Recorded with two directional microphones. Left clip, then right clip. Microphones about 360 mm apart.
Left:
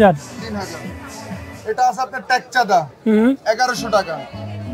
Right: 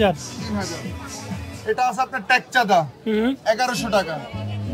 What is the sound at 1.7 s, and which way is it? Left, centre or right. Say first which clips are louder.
Speech: left 4 dB; right.